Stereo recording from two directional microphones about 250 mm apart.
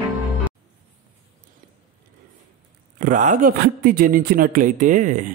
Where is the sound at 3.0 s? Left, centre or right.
Right.